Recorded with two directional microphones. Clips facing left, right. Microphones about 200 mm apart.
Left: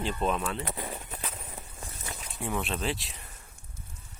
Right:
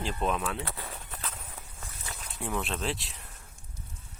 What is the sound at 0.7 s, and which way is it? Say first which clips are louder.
Walk: left 4 dB; 15° left (ahead or behind).